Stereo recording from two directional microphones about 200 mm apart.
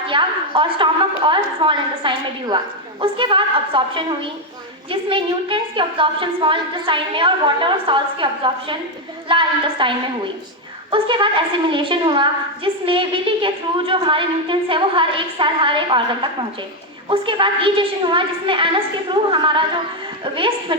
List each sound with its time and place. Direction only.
0.1 s a woman's voice: 25° right (ahead or behind)
10.9 s a woman's voice: 25° right (ahead or behind)